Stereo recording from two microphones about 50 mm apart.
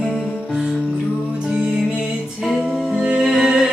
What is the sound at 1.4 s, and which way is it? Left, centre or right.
Music, right.